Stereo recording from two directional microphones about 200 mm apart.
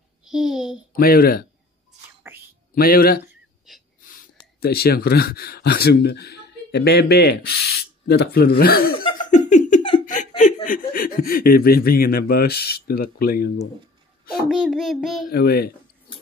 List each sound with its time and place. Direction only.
0.2 s a child's voice: centre (ahead or behind)
0.9 s speech: 50° left (ahead or behind)
2.3 s whispering: 10° right (ahead or behind)
2.7 s speech: 45° left (ahead or behind)
3.7 s a sound: centre (ahead or behind)
4.0 s speech: 40° left (ahead or behind)
9.2 s laughter: 35° left (ahead or behind)
10.0 s speech: 40° left (ahead or behind)
14.5 s child singing: 5° right (ahead or behind)
15.3 s speech: 50° left (ahead or behind)